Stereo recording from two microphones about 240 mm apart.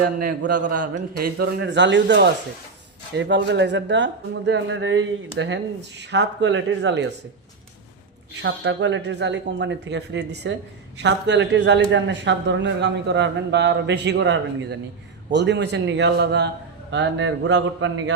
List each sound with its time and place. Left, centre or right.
0.3 s a man's voice: right
0.8 s a man's voice: right
8.4 s a man's voice: right